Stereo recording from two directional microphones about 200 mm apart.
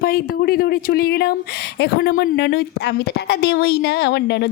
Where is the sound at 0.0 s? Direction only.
50° left (ahead or behind).